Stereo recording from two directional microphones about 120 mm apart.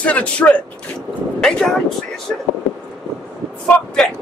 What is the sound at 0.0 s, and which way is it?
Speech, 10° left (ahead or behind).